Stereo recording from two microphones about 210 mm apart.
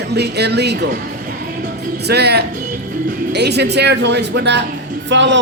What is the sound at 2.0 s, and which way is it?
A man's voice, 50° right (ahead or behind).